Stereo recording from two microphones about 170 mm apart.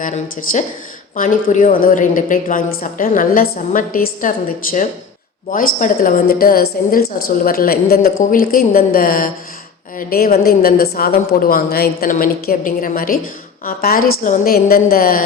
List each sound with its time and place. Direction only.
0.0 s a woman's voice: 50° left (ahead or behind)